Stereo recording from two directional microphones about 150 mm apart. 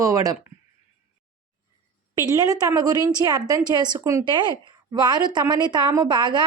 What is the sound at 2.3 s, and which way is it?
A woman's voice, 25° right (ahead or behind).